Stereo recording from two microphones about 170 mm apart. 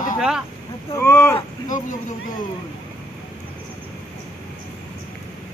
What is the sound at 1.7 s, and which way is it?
Speech, 50° left (ahead or behind).